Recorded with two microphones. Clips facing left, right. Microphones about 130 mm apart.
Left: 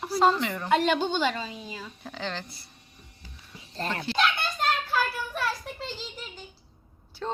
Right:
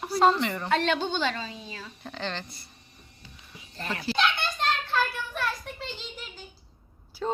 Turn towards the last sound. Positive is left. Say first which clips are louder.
# right 3 dB
turn(degrees=-5)  # may be behind; listen again after turning